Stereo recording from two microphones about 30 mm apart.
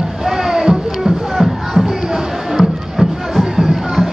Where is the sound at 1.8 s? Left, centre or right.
Centre.